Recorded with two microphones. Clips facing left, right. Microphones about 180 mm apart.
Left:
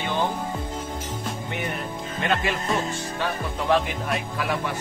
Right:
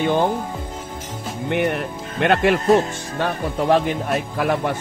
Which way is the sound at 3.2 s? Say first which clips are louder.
Right 8 dB; 45° right (ahead or behind).